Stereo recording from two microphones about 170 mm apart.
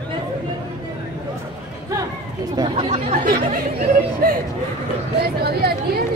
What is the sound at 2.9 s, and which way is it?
Chatter, 50° right (ahead or behind).